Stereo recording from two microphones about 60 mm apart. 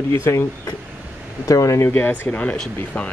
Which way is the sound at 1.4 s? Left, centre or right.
Left.